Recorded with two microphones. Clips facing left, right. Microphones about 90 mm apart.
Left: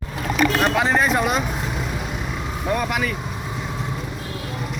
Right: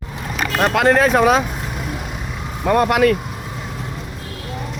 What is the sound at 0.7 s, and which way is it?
Speech, 70° right (ahead or behind).